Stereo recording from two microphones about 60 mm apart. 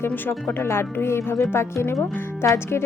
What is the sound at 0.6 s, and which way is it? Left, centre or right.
Speech, left.